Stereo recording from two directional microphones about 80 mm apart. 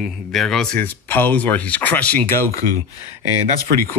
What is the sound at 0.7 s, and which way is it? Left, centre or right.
Speech, left.